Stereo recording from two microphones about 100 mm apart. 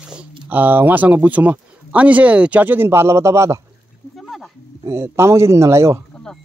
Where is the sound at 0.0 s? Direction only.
10° right (ahead or behind).